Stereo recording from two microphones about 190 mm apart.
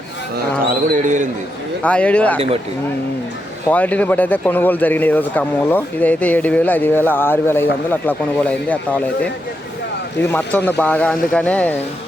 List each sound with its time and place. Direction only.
0.7 s speech: 45° right (ahead or behind)
1.8 s speech: 5° left (ahead or behind)
3.7 s speech: 10° left (ahead or behind)